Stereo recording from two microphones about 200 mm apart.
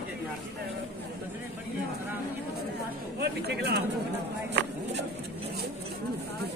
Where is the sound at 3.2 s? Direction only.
55° right (ahead or behind).